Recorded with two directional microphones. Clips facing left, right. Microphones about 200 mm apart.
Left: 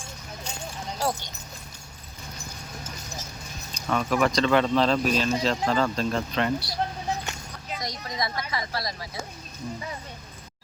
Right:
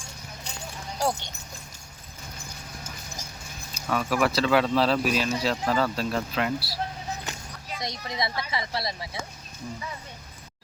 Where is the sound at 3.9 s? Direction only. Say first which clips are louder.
Left 1 dB; 5° right (ahead or behind).